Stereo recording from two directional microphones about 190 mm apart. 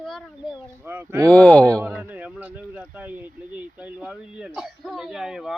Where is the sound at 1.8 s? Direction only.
10° right (ahead or behind).